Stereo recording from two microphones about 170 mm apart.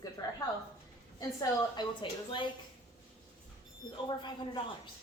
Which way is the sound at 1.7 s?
30° left (ahead or behind).